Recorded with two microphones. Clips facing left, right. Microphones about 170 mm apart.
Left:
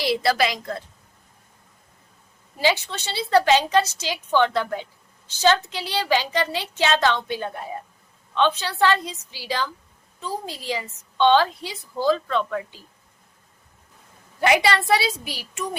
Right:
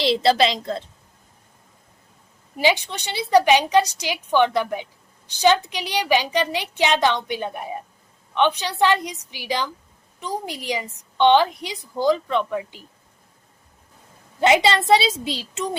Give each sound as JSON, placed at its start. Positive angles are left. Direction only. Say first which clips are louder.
{"t": 0.0, "sound": "a woman's voice", "louder": "right 3 dB", "side_deg": -25}
{"t": 2.6, "sound": "a woman's voice", "louder": "right 2 dB", "side_deg": -15}
{"t": 14.4, "sound": "a woman's voice", "louder": "right 2 dB", "side_deg": -25}